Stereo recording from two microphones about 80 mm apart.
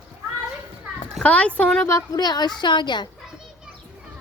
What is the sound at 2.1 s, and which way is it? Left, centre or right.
Speech, left.